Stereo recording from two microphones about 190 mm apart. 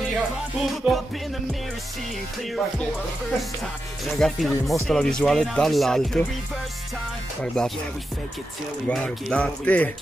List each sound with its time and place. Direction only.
0.1 s music: centre (ahead or behind)
4.0 s speech: centre (ahead or behind)
8.8 s speech: 5° left (ahead or behind)